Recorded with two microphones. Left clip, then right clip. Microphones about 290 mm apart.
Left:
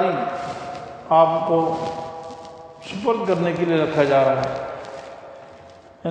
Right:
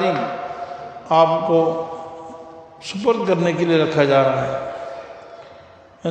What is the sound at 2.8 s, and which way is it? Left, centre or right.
A man's voice, right.